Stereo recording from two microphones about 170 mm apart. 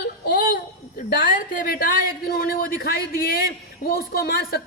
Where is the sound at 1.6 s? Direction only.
60° left (ahead or behind).